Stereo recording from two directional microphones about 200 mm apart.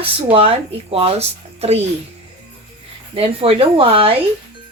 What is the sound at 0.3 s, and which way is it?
A woman's voice, 30° right (ahead or behind).